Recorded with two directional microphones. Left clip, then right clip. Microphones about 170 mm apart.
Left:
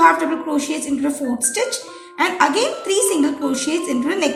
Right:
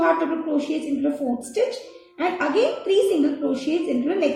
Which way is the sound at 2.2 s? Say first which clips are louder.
Left 4 dB; 15° left (ahead or behind).